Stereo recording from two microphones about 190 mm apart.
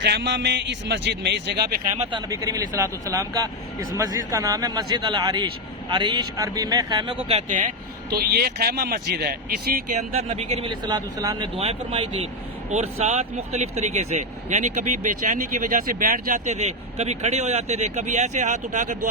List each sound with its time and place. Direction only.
0.0 s a man's voice: 65° right (ahead or behind)
2.3 s speech: 15° right (ahead or behind); by 7.7 s 40° right (ahead or behind)
8.1 s speech: 55° right (ahead or behind); by 11.4 s 20° right (ahead or behind)
11.5 s speech: 35° right (ahead or behind)